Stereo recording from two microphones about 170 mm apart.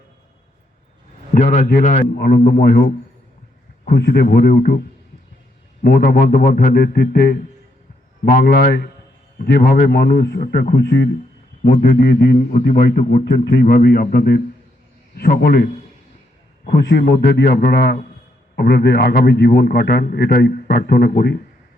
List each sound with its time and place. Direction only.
1.3 s a man's voice: 50° left (ahead or behind)
2.1 s a man's voice: 70° left (ahead or behind)
5.8 s a man's voice: 60° left (ahead or behind)